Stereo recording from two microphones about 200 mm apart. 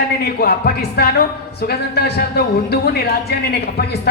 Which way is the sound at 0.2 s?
50° left (ahead or behind).